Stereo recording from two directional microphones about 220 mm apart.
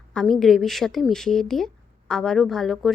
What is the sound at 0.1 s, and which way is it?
A woman's voice, 5° left (ahead or behind).